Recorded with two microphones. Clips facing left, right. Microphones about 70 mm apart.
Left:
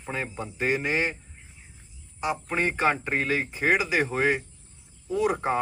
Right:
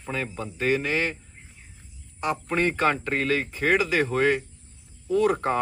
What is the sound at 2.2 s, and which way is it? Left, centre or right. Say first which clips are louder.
Speech: right 2 dB; centre.